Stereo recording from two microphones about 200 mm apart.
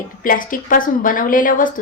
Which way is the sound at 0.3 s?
45° left (ahead or behind).